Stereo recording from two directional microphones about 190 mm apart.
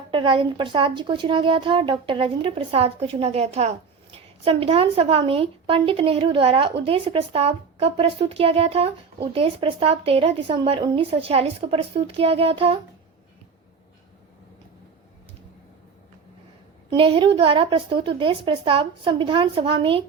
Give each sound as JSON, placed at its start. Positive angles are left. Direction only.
{"t": 0.1, "sound": "a woman's voice", "side_deg": -25}
{"t": 16.9, "sound": "a woman's voice", "side_deg": -25}